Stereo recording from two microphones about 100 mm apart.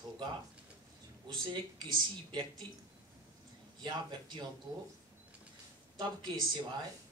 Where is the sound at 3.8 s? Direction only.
45° right (ahead or behind).